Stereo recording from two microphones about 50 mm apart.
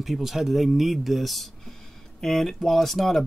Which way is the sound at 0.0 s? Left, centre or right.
Centre.